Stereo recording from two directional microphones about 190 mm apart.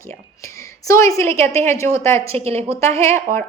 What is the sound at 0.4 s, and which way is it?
A woman's voice, 15° left (ahead or behind).